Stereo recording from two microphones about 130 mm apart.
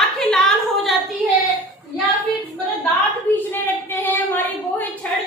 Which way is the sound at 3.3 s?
15° left (ahead or behind).